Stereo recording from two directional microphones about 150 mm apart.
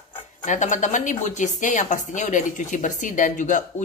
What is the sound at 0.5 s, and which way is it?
Speech, 55° left (ahead or behind).